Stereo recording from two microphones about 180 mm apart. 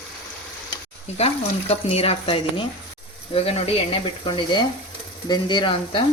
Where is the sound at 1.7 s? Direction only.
35° left (ahead or behind).